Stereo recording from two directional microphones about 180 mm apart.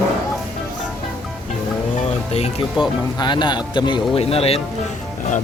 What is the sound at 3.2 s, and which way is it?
A man's voice, 25° left (ahead or behind).